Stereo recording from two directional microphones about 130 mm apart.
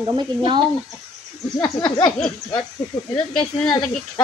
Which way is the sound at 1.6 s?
30° left (ahead or behind).